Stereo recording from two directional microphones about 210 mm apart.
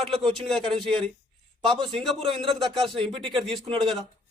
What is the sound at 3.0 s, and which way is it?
Speech, 25° right (ahead or behind).